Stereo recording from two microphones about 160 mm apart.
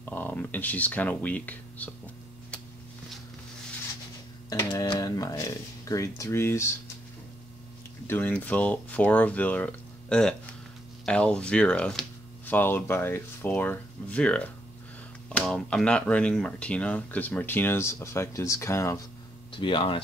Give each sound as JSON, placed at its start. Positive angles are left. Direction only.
{"t": 0.0, "sound": "speech", "side_deg": 10}
{"t": 4.5, "sound": "speech", "side_deg": 20}
{"t": 8.1, "sound": "speech", "side_deg": 10}
{"t": 19.5, "sound": "speech", "side_deg": 30}